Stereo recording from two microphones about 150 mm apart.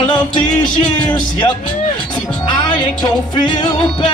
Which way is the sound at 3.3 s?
30° left (ahead or behind).